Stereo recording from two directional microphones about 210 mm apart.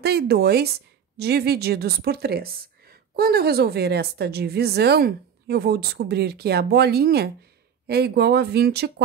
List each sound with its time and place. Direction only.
0.0 s speech: 50° right (ahead or behind)